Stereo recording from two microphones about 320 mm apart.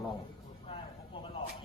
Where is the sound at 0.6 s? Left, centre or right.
Centre.